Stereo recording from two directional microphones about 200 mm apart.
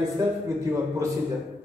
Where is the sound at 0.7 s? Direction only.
15° right (ahead or behind).